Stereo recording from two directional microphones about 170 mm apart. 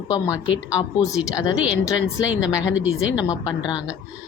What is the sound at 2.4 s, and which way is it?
Speech, 5° right (ahead or behind).